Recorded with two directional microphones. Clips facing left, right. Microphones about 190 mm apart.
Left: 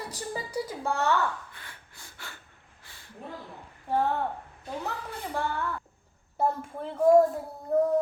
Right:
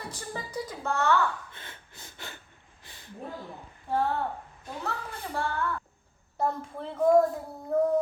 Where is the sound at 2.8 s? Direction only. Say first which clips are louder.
Right 2 dB; 20° right (ahead or behind).